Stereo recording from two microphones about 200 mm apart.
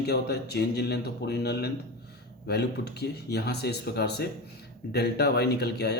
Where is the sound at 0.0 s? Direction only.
55° left (ahead or behind).